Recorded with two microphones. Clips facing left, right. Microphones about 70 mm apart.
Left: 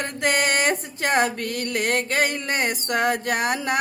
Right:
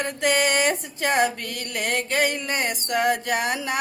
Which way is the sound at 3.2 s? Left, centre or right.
Left.